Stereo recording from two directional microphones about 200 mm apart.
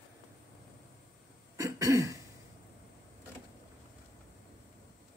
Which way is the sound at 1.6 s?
15° right (ahead or behind).